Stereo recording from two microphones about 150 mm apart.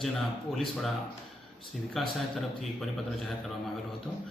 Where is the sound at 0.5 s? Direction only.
Centre (ahead or behind).